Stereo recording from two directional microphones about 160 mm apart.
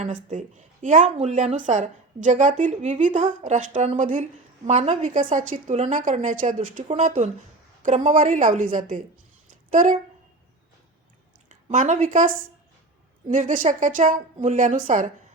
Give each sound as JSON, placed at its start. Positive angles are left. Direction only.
{"t": 0.0, "sound": "speech", "side_deg": -50}
{"t": 11.4, "sound": "speech", "side_deg": -50}